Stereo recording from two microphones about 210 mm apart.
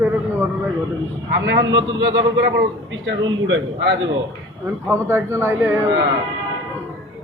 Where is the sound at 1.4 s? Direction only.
60° right (ahead or behind).